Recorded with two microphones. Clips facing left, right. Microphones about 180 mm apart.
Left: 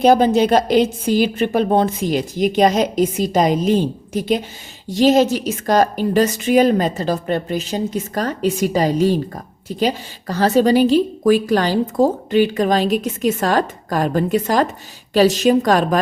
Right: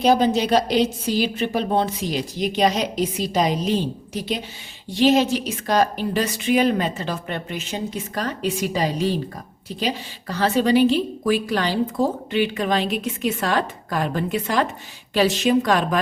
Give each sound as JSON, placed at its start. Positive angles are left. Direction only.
{"t": 0.0, "sound": "a woman's voice", "side_deg": 50}